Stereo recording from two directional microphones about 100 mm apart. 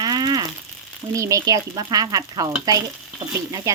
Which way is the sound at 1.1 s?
30° right (ahead or behind).